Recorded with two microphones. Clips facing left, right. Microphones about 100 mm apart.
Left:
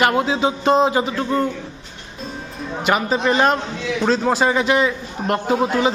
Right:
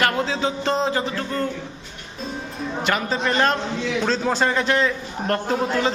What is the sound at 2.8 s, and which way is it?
A man's voice, 15° left (ahead or behind).